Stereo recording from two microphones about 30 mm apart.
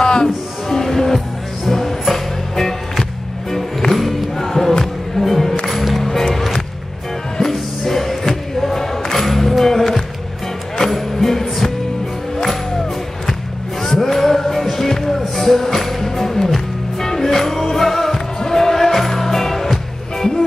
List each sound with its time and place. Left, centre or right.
0.0 s music: left
0.8 s music: centre
9.0 s music: centre
11.1 s music: centre
13.8 s music: centre